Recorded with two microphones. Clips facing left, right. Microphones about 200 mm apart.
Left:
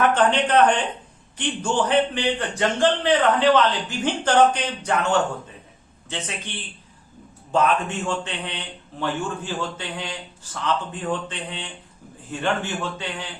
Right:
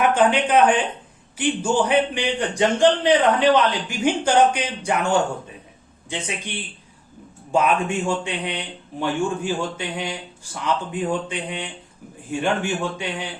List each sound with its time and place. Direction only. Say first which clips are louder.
0.0 s a man's voice: right 1 dB; 10° right (ahead or behind)
7.5 s a man's voice: right 1 dB; 10° right (ahead or behind)